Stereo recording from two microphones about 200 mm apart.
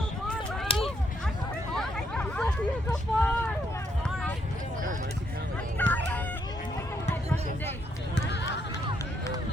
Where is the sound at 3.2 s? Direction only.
10° left (ahead or behind).